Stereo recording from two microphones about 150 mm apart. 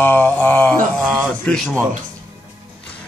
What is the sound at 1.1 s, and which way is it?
Speech, centre (ahead or behind).